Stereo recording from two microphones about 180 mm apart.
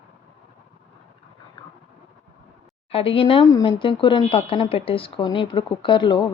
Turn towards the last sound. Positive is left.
turn(degrees=25)  # may be behind; listen again after turning